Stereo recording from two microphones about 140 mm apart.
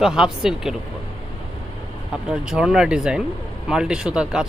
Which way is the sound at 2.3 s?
5° right (ahead or behind).